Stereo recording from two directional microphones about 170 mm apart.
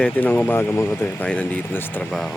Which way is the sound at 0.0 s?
10° left (ahead or behind).